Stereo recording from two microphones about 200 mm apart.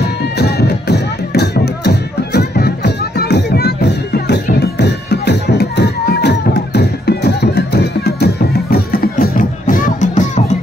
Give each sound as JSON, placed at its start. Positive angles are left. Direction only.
{"t": 0.4, "sound": "music", "side_deg": 55}